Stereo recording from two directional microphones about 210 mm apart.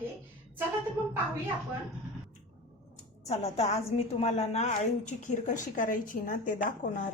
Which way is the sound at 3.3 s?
30° left (ahead or behind).